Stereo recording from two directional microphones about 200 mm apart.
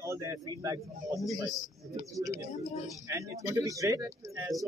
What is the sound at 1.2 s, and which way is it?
Speech, centre (ahead or behind).